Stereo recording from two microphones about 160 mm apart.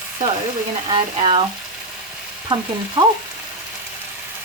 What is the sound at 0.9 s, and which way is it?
Speech, 35° right (ahead or behind).